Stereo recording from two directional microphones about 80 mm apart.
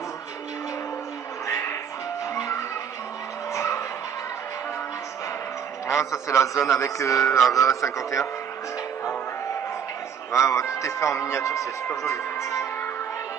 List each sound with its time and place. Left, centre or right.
1.5 s music: left
2.3 s music: left
3.5 s music: left
5.9 s a man's voice: left
7.2 s mantra: centre
7.5 s speech: left
10.3 s a man's voice: left